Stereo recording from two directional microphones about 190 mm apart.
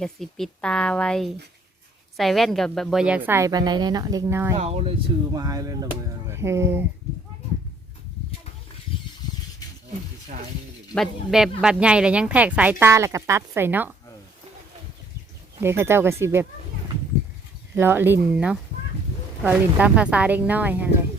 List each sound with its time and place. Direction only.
0.0 s speech: centre (ahead or behind); by 4.5 s 15° right (ahead or behind)
4.5 s speech: 30° right (ahead or behind); by 6.8 s 15° right (ahead or behind)
10.9 s speech: centre (ahead or behind)
15.6 s speech: 15° right (ahead or behind)
17.7 s speech: 10° right (ahead or behind)